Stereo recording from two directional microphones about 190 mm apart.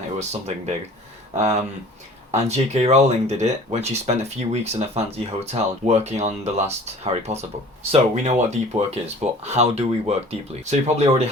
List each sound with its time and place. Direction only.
0.2 s speech: 35° right (ahead or behind)